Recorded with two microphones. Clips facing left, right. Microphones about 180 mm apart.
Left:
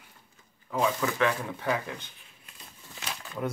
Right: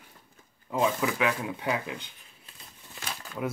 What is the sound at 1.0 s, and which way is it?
Speech, 10° right (ahead or behind).